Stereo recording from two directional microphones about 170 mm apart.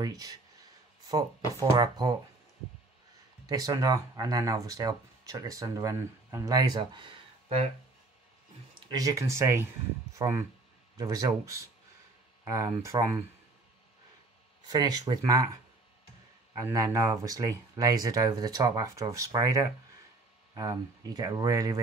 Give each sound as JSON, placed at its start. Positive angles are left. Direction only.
{"t": 0.0, "sound": "speech", "side_deg": -20}
{"t": 1.6, "sound": "speech", "side_deg": -25}
{"t": 3.4, "sound": "speech", "side_deg": -20}
{"t": 8.7, "sound": "speech", "side_deg": -25}
{"t": 14.7, "sound": "speech", "side_deg": -20}